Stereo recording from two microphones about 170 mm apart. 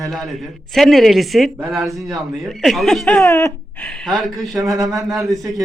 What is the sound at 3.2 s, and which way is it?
Speech, 15° left (ahead or behind).